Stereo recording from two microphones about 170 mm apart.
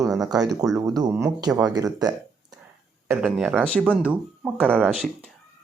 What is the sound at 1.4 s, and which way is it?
Speech, 25° right (ahead or behind).